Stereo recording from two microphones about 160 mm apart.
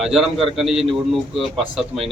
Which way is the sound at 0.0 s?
Centre (ahead or behind).